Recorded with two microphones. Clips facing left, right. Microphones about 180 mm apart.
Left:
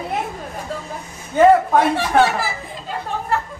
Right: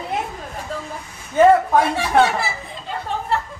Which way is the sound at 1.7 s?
Centre (ahead or behind).